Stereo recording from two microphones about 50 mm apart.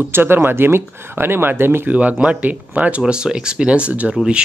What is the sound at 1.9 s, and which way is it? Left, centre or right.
Speech, right.